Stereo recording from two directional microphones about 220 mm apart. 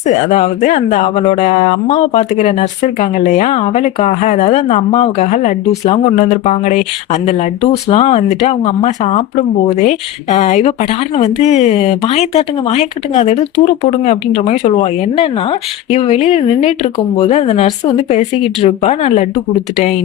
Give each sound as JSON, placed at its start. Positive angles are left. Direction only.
{"t": 0.0, "sound": "speech", "side_deg": 30}